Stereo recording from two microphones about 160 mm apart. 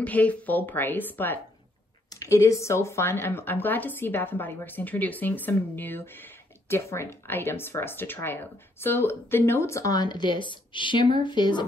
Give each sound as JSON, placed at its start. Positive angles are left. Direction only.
{"t": 0.0, "sound": "speech", "side_deg": 10}